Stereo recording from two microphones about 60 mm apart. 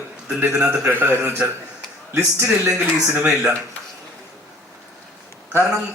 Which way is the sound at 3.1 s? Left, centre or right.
Right.